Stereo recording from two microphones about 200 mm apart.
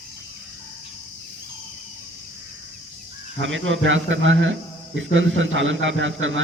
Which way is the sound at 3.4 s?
70° right (ahead or behind).